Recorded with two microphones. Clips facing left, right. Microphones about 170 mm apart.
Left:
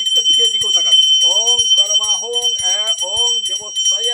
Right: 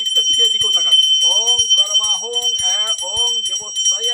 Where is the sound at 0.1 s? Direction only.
15° left (ahead or behind).